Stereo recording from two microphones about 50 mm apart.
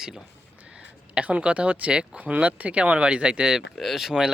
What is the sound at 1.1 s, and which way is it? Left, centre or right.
Speech, right.